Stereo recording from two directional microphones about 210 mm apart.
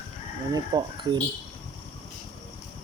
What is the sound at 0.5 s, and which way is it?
Speech, 20° right (ahead or behind).